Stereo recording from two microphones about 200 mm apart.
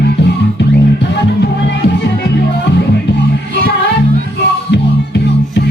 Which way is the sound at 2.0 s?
60° left (ahead or behind).